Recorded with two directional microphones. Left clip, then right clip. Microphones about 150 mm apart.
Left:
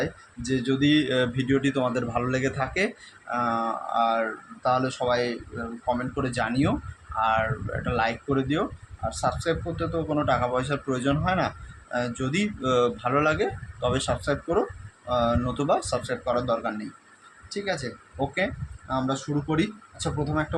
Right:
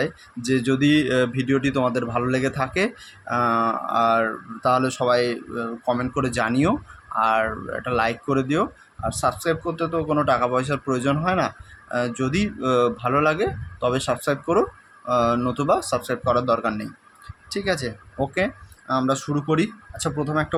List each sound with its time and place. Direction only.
0.0 s speech: 45° right (ahead or behind)